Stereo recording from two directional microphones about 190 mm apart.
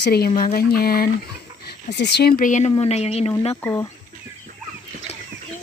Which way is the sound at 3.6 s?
15° left (ahead or behind).